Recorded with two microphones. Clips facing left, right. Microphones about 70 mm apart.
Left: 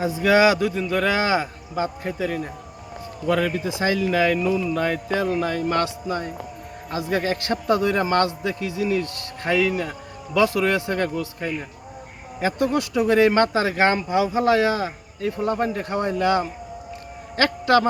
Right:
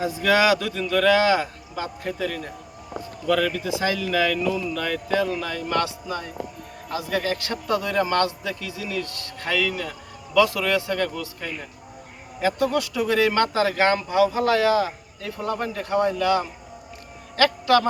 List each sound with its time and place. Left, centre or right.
0.0 s a man's voice: left